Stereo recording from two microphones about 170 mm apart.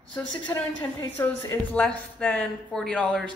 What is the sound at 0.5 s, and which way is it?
Speech, 15° left (ahead or behind).